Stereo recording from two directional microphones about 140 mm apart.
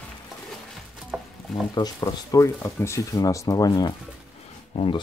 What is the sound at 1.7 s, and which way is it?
Speech, 25° left (ahead or behind).